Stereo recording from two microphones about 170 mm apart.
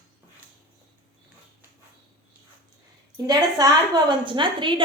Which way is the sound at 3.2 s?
20° right (ahead or behind).